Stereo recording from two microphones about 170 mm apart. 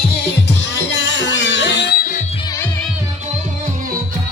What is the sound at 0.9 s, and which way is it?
Music, 90° left.